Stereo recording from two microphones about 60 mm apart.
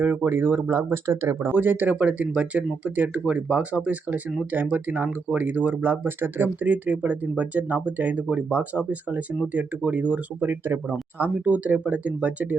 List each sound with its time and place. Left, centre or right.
0.0 s speech: right
1.5 s speech: right
10.4 s speech: right
11.2 s speech: right